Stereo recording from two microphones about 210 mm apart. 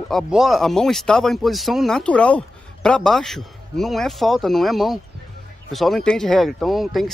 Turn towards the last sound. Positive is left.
turn(degrees=0)  # may be behind; listen again after turning